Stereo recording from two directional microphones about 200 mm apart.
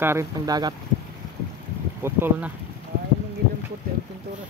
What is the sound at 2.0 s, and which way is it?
Speech, 10° right (ahead or behind).